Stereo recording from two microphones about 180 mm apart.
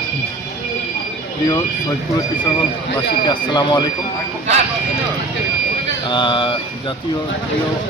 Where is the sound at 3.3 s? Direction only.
20° left (ahead or behind).